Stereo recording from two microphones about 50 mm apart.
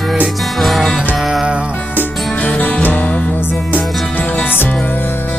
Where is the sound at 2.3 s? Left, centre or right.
Left.